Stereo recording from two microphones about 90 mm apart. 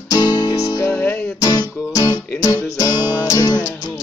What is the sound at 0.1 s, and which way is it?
Music, 50° left (ahead or behind).